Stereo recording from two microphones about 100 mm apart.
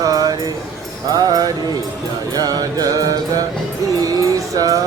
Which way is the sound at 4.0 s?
35° right (ahead or behind).